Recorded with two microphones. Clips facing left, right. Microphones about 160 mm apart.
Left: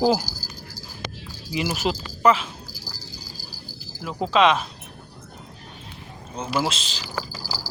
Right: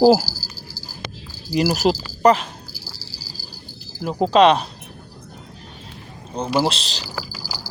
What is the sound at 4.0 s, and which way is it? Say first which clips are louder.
Speech: right 5 dB; 40° right (ahead or behind).